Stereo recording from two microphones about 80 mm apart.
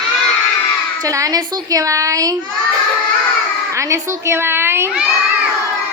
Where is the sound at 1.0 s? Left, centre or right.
Right.